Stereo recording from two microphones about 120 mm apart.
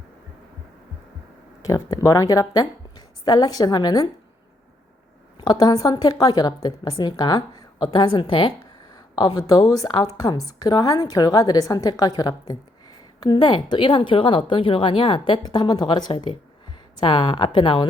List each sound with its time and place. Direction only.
1.6 s speech: 30° left (ahead or behind)
5.4 s speech: 35° left (ahead or behind)